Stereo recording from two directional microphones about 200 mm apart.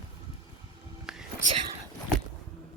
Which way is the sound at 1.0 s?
Centre (ahead or behind).